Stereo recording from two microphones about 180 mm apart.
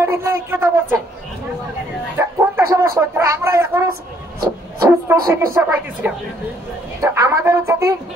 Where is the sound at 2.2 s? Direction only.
15° right (ahead or behind).